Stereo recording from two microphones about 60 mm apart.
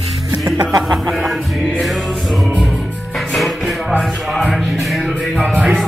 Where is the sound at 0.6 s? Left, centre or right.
Right.